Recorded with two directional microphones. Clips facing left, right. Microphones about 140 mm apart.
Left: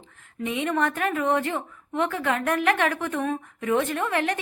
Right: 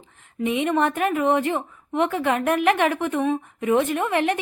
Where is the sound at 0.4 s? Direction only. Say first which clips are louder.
Right 4 dB; 20° right (ahead or behind).